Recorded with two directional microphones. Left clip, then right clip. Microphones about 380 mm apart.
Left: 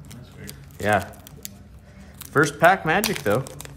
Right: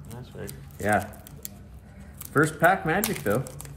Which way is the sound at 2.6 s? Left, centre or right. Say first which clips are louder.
Left 6 dB; centre.